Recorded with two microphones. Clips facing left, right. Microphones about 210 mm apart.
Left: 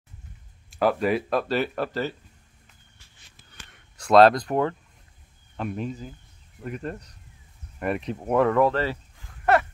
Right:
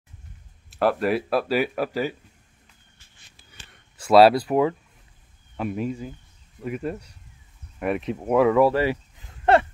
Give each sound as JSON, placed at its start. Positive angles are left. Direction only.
{"t": 0.7, "sound": "speech", "side_deg": 0}
{"t": 3.7, "sound": "speech", "side_deg": -5}
{"t": 9.5, "sound": "a sound", "side_deg": -25}